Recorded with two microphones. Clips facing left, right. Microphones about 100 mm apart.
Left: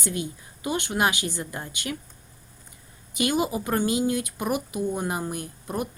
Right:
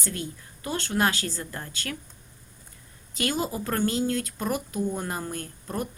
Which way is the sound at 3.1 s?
15° left (ahead or behind).